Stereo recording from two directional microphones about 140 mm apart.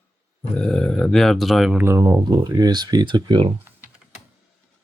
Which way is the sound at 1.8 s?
20° right (ahead or behind).